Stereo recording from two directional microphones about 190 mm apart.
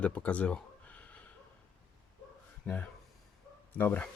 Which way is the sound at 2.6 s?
5° left (ahead or behind).